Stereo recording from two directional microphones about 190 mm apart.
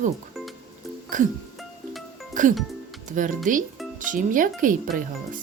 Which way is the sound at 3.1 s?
45° right (ahead or behind).